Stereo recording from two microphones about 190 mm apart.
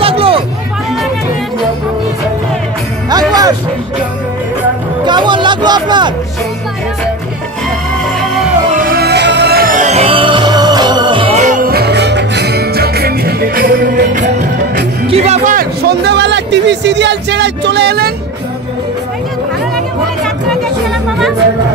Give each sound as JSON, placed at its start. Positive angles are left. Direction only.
{"t": 0.0, "sound": "hubbub", "side_deg": -30}
{"t": 5.0, "sound": "hubbub", "side_deg": -25}
{"t": 8.7, "sound": "music", "side_deg": -50}
{"t": 15.0, "sound": "music", "side_deg": -35}
{"t": 15.9, "sound": "speech", "side_deg": -60}